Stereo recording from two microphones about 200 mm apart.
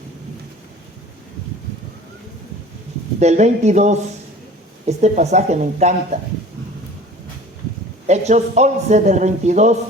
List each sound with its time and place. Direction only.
3.2 s a man's voice: 35° right (ahead or behind)
8.0 s a man's voice: 35° right (ahead or behind)